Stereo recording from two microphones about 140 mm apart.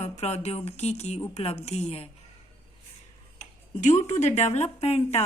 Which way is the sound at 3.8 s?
55° left (ahead or behind).